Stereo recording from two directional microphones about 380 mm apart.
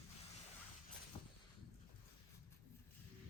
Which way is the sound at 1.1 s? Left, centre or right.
Centre.